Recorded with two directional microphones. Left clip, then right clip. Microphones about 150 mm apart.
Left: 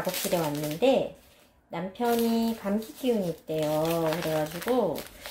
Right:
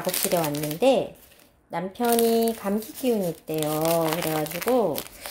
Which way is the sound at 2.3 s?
45° right (ahead or behind).